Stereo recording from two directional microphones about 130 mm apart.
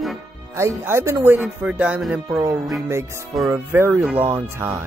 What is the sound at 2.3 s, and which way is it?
Speech, 20° right (ahead or behind).